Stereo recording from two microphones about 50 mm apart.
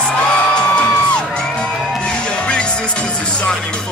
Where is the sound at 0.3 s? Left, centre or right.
Centre.